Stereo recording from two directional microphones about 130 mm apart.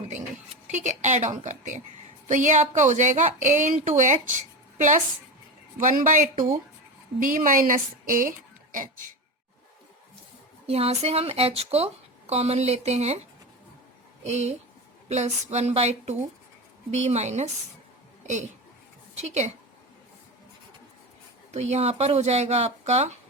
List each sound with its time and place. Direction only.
0.7 s a woman's voice: 65° right (ahead or behind)
5.8 s a woman's voice: 85° right
10.7 s speech: 50° right (ahead or behind)
14.3 s speech: 60° right (ahead or behind)
18.2 s a sound: 65° right (ahead or behind)
19.1 s a woman's voice: 60° right (ahead or behind)
21.5 s speech: 55° right (ahead or behind)